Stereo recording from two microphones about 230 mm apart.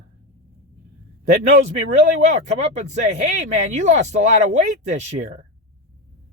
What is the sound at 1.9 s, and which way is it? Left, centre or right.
Speech, right.